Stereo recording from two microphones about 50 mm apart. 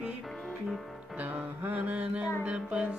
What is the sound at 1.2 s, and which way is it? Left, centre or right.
Music, right.